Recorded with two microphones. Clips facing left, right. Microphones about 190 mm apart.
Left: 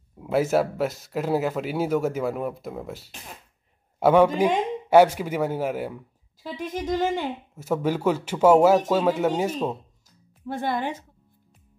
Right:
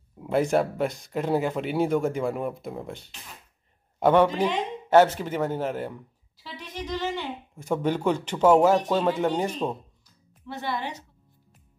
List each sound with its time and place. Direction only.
0.2 s a man's voice: 5° left (ahead or behind)
6.4 s a woman's voice: 50° left (ahead or behind)
7.5 s a man's voice: 5° left (ahead or behind)
10.0 s music: 45° left (ahead or behind)